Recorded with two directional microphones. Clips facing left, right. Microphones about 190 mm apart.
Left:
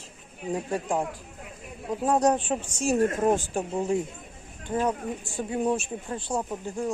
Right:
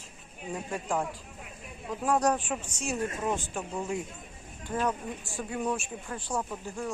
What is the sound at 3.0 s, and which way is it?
Speech, 50° left (ahead or behind).